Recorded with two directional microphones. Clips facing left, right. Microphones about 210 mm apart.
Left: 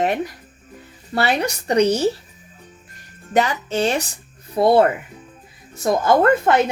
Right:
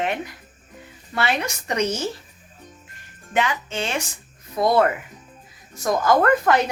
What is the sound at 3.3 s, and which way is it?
A woman's voice, 40° left (ahead or behind).